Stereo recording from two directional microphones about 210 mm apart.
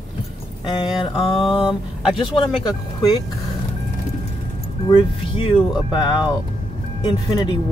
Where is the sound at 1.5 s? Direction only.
25° left (ahead or behind).